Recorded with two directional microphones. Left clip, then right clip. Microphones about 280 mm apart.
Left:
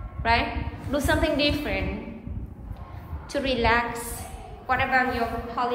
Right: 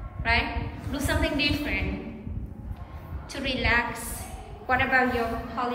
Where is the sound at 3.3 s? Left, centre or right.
Centre.